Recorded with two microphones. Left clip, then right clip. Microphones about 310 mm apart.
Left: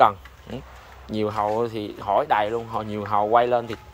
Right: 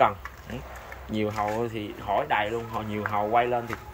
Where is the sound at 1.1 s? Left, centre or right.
Centre.